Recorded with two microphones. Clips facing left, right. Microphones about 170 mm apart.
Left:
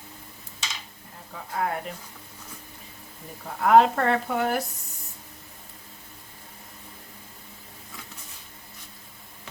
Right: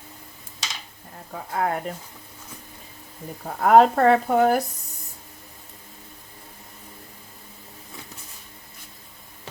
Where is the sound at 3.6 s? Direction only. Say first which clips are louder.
Right 3 dB; 40° right (ahead or behind).